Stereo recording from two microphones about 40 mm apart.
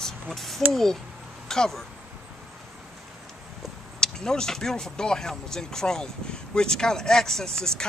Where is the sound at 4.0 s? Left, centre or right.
Centre.